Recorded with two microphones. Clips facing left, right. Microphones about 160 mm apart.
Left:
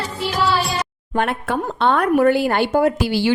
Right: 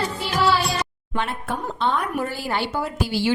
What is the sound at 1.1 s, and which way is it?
Speech, 65° left (ahead or behind).